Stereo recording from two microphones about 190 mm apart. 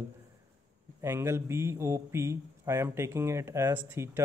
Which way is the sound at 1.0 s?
15° right (ahead or behind).